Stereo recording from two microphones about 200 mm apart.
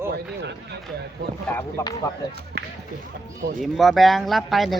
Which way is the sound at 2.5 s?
55° right (ahead or behind).